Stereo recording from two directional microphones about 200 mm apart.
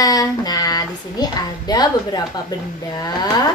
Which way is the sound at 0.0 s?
20° left (ahead or behind).